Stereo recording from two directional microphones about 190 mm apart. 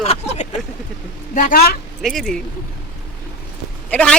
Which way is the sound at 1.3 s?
45° left (ahead or behind).